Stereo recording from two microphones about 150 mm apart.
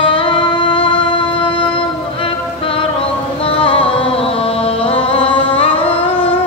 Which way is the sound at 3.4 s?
40° left (ahead or behind).